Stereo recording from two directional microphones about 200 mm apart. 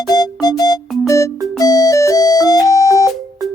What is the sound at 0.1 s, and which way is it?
Music, 20° left (ahead or behind).